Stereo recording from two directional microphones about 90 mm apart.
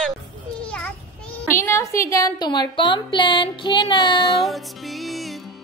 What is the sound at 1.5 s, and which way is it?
A woman's voice, 30° left (ahead or behind).